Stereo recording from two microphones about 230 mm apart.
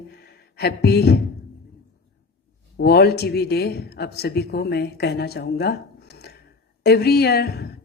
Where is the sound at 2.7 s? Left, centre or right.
Left.